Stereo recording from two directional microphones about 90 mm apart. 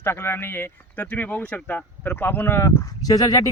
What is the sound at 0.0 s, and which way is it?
Speech, 25° left (ahead or behind).